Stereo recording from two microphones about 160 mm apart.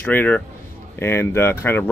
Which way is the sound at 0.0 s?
10° left (ahead or behind).